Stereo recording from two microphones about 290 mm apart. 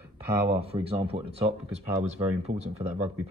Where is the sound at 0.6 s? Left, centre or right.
Centre.